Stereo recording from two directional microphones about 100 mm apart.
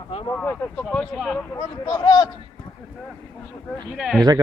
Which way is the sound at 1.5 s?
45° left (ahead or behind).